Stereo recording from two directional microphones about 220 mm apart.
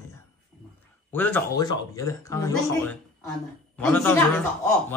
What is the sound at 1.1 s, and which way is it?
A man's voice, 10° left (ahead or behind).